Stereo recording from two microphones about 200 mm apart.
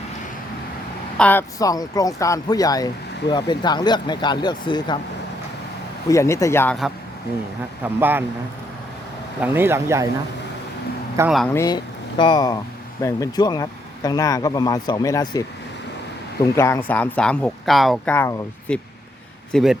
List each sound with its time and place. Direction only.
1.2 s speech: 10° left (ahead or behind)
6.1 s speech: 15° left (ahead or behind)
7.9 s speech: 10° right (ahead or behind)
9.4 s speech: 10° right (ahead or behind)
11.2 s speech: 15° right (ahead or behind)
11.5 s speech: 20° left (ahead or behind)
16.6 s speech: 15° left (ahead or behind)